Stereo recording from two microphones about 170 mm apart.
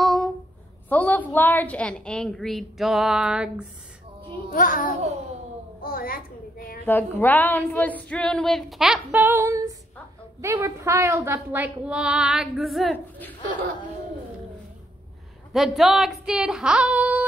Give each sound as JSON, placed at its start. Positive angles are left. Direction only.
{"t": 0.0, "sound": "a sound", "side_deg": 0}
{"t": 0.8, "sound": "speech", "side_deg": 10}
{"t": 4.5, "sound": "a child's voice", "side_deg": 55}
{"t": 5.8, "sound": "a sound", "side_deg": 60}
{"t": 6.9, "sound": "a woman's voice", "side_deg": 10}
{"t": 15.5, "sound": "speech", "side_deg": 0}